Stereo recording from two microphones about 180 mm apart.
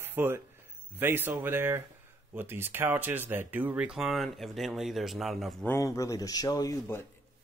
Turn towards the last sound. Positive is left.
turn(degrees=15)  # may be behind; listen again after turning